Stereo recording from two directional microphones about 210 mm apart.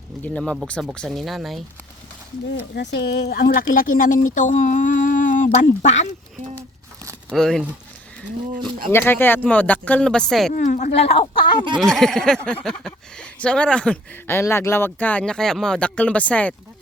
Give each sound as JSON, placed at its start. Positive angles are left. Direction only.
{"t": 0.2, "sound": "speech", "side_deg": 5}
{"t": 2.5, "sound": "speech", "side_deg": 55}
{"t": 7.0, "sound": "a sound", "side_deg": -15}
{"t": 7.3, "sound": "speech", "side_deg": 0}
{"t": 8.9, "sound": "speech", "side_deg": 10}
{"t": 10.5, "sound": "speech", "side_deg": 40}
{"t": 11.8, "sound": "speech", "side_deg": 0}